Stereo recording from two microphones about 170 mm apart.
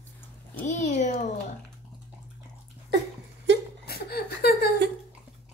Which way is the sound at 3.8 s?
65° left (ahead or behind).